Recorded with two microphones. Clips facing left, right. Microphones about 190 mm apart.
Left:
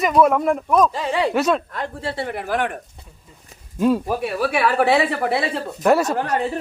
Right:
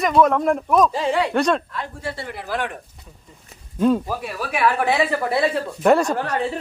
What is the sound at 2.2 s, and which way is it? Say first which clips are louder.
Speech: left 5 dB; 55° left (ahead or behind).